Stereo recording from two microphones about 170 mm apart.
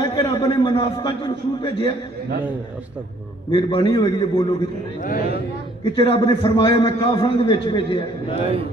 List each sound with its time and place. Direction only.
0.0 s a sound: 20° left (ahead or behind)
0.4 s a man's voice: 25° left (ahead or behind)
3.5 s a man's voice: 30° left (ahead or behind)
5.0 s speech: 55° left (ahead or behind)
5.9 s a man's voice: 30° left (ahead or behind)